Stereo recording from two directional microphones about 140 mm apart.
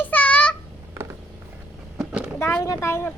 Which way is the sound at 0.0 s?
10° left (ahead or behind).